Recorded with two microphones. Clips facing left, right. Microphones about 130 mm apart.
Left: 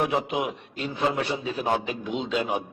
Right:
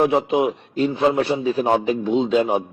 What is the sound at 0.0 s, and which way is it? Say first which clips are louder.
A man's voice: right 8 dB; 30° right (ahead or behind).